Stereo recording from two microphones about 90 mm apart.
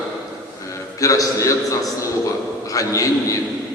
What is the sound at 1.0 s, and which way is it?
A man's voice, 40° left (ahead or behind).